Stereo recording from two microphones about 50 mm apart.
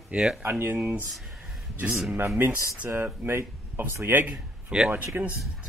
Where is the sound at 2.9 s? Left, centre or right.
Right.